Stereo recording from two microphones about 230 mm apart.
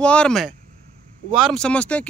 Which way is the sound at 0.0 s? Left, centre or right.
Centre.